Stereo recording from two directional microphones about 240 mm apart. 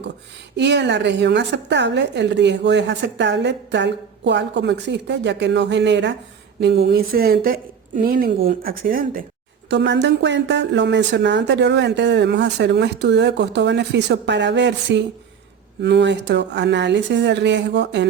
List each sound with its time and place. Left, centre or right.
0.5 s a woman's voice: right
9.6 s a woman's voice: right